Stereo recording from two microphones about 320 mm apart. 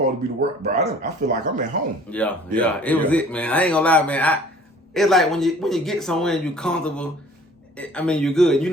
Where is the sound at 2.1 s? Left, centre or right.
Centre.